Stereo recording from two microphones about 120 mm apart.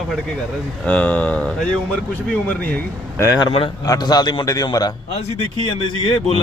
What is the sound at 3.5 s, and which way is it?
Speech, 55° left (ahead or behind).